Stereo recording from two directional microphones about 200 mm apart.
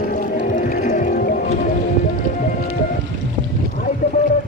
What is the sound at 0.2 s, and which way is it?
Music, 45° left (ahead or behind).